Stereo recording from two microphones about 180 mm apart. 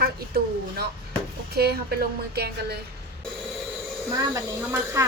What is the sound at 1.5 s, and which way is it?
A woman's voice, 60° right (ahead or behind).